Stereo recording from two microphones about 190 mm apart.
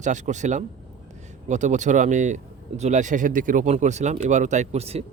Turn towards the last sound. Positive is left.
turn(degrees=-35)  # may be behind; listen again after turning